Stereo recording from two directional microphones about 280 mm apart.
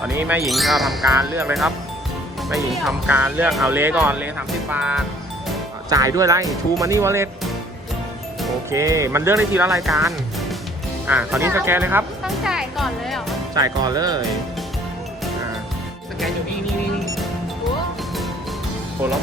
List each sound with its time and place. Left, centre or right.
0.1 s speech: centre
8.7 s speech: centre
11.0 s speech: centre
13.5 s speech: centre